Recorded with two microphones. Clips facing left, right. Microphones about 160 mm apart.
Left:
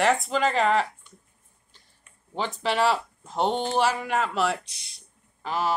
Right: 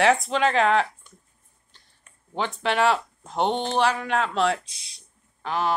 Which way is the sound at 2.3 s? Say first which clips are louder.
Right 1 dB; centre (ahead or behind).